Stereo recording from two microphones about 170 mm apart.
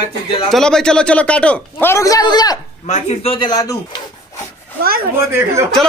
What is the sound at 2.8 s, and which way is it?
Speech, 45° left (ahead or behind).